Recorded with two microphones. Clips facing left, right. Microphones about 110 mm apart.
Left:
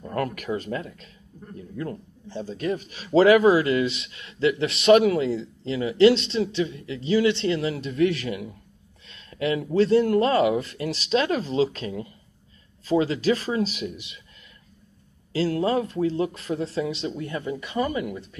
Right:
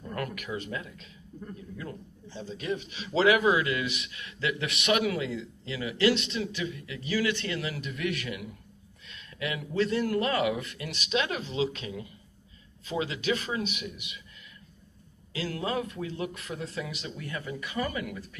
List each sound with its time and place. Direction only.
0.1 s speech: 40° left (ahead or behind)
15.3 s speech: 30° left (ahead or behind)